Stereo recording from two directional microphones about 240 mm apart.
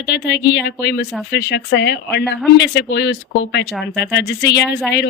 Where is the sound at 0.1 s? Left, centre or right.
Left.